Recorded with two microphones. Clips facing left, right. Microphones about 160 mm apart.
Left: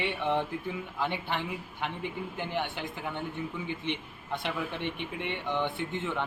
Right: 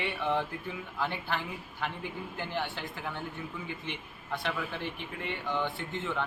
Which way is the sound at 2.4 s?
20° left (ahead or behind).